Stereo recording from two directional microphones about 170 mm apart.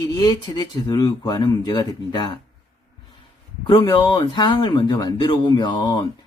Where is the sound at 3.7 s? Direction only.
30° left (ahead or behind).